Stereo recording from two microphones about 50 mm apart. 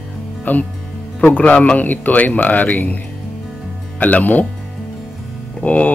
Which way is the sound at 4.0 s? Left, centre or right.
Left.